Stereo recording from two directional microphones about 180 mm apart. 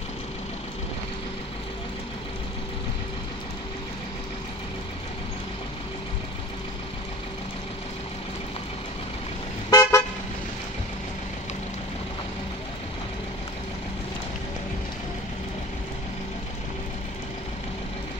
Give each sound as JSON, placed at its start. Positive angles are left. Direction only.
{"t": 9.7, "sound": "car", "side_deg": 15}